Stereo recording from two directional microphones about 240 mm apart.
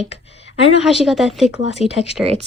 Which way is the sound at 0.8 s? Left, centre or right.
Centre.